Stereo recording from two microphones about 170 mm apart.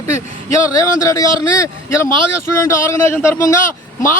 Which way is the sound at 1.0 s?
20° left (ahead or behind).